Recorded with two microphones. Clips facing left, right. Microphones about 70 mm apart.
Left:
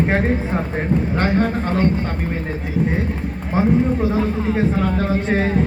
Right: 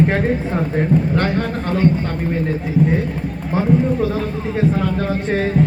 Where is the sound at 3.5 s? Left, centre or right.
Left.